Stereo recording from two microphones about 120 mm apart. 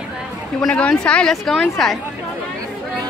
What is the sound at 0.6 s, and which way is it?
Speech, 10° left (ahead or behind).